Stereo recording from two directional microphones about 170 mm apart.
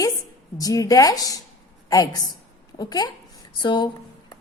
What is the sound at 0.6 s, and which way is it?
A woman's voice, 20° left (ahead or behind).